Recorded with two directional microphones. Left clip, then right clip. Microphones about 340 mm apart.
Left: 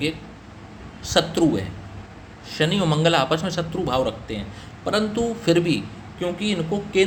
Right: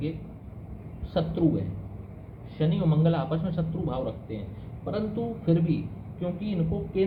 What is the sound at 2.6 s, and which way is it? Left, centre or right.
A man's voice, left.